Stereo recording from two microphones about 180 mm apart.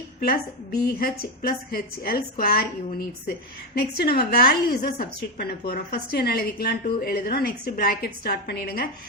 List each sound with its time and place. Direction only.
0.2 s a woman's voice: 60° left (ahead or behind)